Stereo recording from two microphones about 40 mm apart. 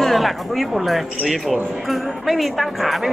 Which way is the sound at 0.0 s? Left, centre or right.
Centre.